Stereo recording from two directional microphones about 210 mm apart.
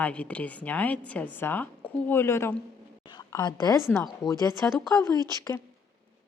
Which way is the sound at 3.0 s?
20° left (ahead or behind).